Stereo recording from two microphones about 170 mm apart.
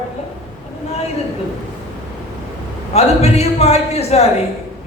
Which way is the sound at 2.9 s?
40° left (ahead or behind).